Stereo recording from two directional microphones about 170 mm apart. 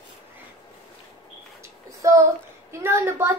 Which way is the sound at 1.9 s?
20° right (ahead or behind).